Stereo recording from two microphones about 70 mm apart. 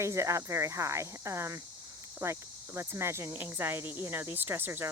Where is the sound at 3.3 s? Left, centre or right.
Right.